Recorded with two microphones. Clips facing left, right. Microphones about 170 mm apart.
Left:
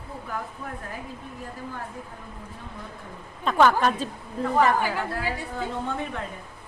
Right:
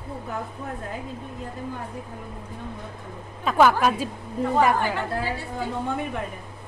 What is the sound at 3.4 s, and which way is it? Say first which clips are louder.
A woman's voice: right 1 dB; 5° right (ahead or behind).